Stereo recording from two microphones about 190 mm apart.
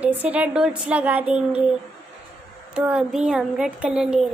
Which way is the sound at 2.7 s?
5° right (ahead or behind).